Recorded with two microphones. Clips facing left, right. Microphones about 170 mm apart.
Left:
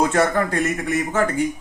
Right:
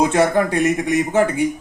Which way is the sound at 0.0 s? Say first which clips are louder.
Right 3 dB; 15° right (ahead or behind).